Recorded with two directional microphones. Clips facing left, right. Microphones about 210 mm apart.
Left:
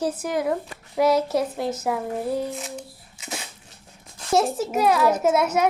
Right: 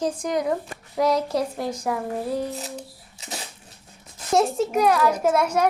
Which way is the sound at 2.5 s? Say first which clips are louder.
Even; 35° right (ahead or behind).